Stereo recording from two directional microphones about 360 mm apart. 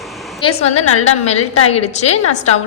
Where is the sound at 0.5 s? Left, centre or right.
Centre.